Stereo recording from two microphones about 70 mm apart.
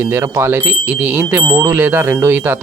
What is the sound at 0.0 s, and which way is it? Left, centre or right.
Speech, right.